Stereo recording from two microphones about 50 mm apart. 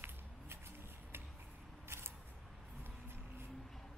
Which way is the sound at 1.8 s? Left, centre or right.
Right.